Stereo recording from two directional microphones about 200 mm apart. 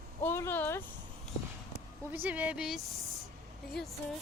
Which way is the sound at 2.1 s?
10° right (ahead or behind).